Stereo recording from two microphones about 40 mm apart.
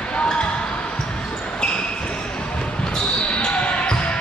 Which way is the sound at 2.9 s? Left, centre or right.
Left.